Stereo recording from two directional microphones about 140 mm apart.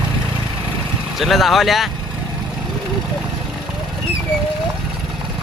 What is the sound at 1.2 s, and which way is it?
Speech, centre (ahead or behind).